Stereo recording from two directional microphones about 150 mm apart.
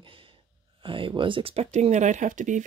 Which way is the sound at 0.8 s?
35° right (ahead or behind).